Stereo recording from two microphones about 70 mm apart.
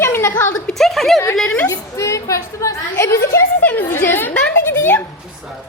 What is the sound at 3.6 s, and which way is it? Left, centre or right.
A woman's voice, left.